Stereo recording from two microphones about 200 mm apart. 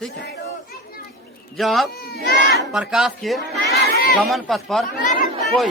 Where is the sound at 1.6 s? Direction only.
Centre (ahead or behind).